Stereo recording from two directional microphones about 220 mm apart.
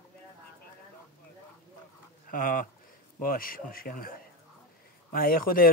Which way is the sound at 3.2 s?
40° left (ahead or behind).